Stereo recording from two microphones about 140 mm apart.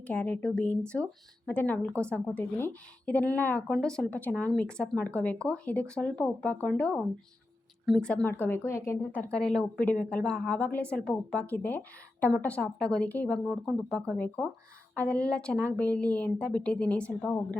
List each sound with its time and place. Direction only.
0.0 s speech: 10° left (ahead or behind)